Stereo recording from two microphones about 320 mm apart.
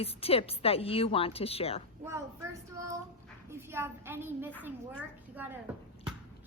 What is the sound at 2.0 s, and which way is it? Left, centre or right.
A woman's voice, centre.